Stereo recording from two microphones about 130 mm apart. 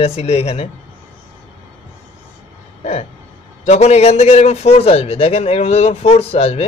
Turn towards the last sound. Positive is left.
turn(degrees=50)  # may be behind; listen again after turning